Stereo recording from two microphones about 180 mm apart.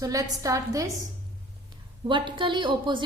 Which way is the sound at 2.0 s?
25° right (ahead or behind).